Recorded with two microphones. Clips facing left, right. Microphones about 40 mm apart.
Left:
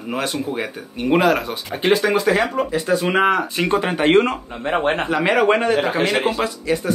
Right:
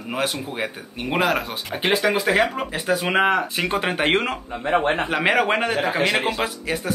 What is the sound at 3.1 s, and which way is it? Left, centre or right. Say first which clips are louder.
Speech: left 1 dB; centre.